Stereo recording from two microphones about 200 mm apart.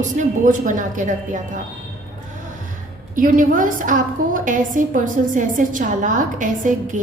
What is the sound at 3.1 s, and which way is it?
A woman's voice, 40° right (ahead or behind).